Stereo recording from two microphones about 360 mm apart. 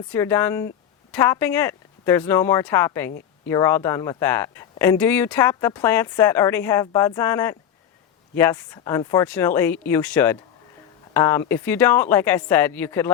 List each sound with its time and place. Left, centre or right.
0.1 s speech: centre
3.1 s a sound: left
3.5 s speech: centre